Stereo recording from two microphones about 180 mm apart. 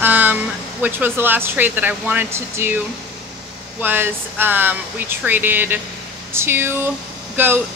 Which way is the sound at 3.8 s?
10° right (ahead or behind).